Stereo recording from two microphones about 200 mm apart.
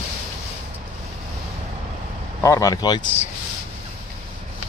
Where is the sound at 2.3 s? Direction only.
15° left (ahead or behind).